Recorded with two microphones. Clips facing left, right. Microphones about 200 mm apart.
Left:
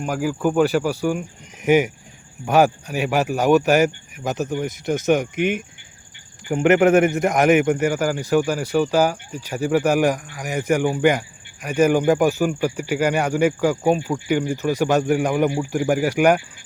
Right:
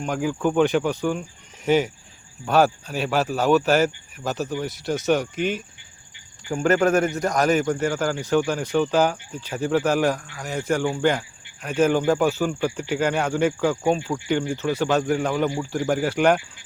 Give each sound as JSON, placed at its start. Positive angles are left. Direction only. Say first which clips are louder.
{"t": 0.0, "sound": "a man's voice", "louder": "left 2 dB", "side_deg": 5}